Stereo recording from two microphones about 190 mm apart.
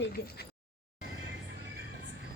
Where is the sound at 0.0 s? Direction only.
55° left (ahead or behind).